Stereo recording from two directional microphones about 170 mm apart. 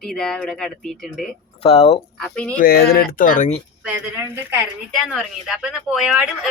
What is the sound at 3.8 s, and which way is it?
Speech, 10° right (ahead or behind).